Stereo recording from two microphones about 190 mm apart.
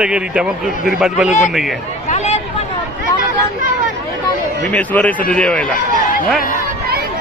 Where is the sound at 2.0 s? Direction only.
35° left (ahead or behind).